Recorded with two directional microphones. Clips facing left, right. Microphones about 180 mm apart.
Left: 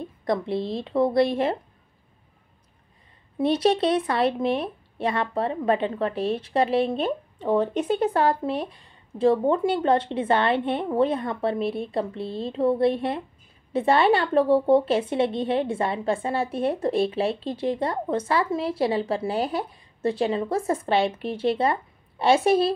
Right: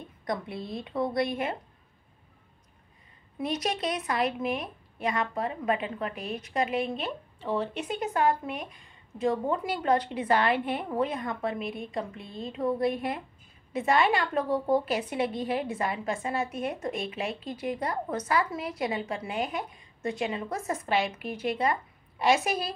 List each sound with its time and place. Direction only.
0.2 s speech: 30° left (ahead or behind)
3.3 s a woman's voice: 30° left (ahead or behind)
7.4 s speech: 45° left (ahead or behind)
7.8 s a woman's voice: 30° left (ahead or behind)